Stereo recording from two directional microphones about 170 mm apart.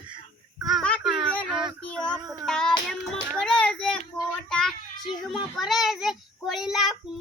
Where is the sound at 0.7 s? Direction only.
5° left (ahead or behind).